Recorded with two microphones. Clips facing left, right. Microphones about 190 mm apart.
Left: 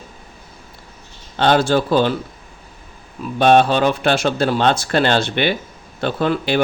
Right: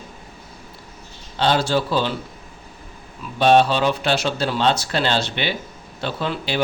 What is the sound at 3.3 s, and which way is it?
Speech, 55° left (ahead or behind).